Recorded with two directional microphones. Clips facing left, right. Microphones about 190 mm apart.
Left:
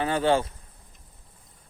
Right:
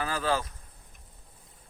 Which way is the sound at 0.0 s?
25° left (ahead or behind).